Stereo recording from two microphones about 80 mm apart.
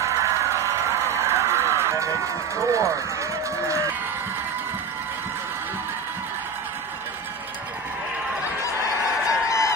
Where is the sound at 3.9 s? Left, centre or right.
Right.